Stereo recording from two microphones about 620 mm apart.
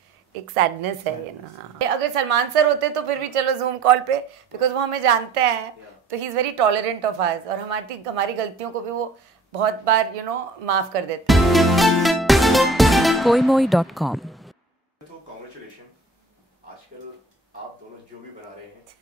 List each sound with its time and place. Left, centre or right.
1.1 s a woman's voice: right
1.8 s a woman's voice: right
11.2 s music: centre